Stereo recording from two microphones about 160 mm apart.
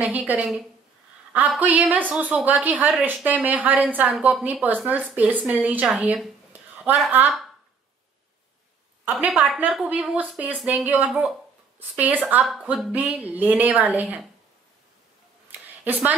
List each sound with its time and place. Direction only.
0.0 s speech: 10° right (ahead or behind)
9.2 s a woman's voice: centre (ahead or behind)
15.8 s speech: 10° right (ahead or behind)